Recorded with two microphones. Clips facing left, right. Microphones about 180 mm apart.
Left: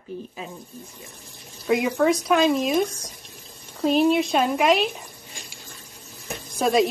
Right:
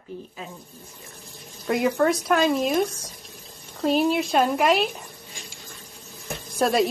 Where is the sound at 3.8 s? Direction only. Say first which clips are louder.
Left 2 dB; centre (ahead or behind).